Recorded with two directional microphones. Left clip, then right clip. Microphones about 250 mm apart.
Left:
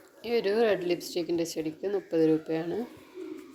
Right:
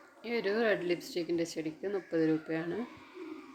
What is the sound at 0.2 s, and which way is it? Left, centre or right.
Speech, centre.